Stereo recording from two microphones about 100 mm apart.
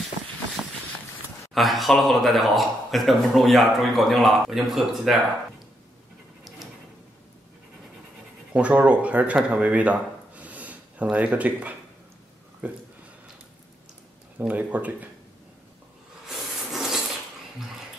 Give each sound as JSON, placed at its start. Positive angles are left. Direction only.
{"t": 0.6, "sound": "run", "side_deg": -15}
{"t": 1.5, "sound": "speech", "side_deg": 0}
{"t": 8.5, "sound": "speech", "side_deg": -10}
{"t": 14.5, "sound": "speech", "side_deg": -15}
{"t": 16.3, "sound": "a sound", "side_deg": 0}